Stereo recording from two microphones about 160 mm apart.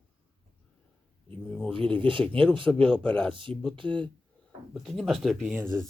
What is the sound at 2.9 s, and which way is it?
Speech, 5° left (ahead or behind).